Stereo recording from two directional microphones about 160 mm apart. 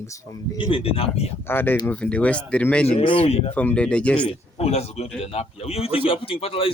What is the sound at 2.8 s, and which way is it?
Speech, 35° left (ahead or behind).